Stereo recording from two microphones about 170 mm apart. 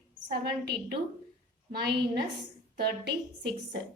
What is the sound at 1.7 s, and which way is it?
Speech, 70° right (ahead or behind).